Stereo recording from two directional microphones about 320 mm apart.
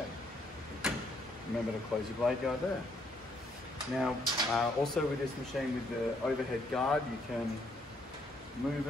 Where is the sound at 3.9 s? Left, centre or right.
Centre.